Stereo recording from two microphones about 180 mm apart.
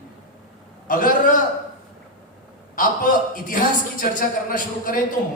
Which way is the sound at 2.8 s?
50° left (ahead or behind).